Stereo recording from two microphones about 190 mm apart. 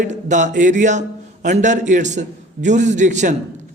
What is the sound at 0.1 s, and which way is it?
A man's voice, 40° right (ahead or behind).